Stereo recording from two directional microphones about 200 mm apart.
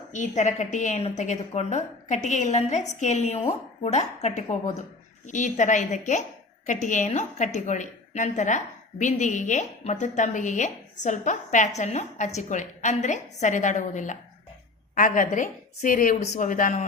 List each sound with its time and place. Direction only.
0.1 s a woman's voice: 35° left (ahead or behind)